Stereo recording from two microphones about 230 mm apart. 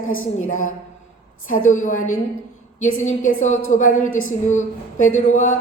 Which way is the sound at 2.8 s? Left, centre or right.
Left.